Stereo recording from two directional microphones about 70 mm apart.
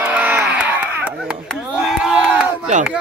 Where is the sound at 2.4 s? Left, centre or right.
Centre.